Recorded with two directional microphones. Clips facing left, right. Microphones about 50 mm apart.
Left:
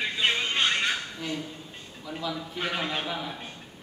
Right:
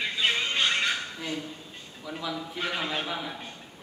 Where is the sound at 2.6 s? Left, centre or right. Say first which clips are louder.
Left 1 dB; centre.